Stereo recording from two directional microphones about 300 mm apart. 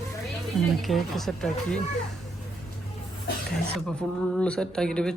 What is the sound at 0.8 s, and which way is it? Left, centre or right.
Speech, centre.